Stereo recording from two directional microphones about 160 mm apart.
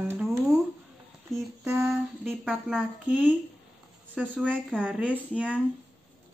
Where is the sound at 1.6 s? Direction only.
15° right (ahead or behind).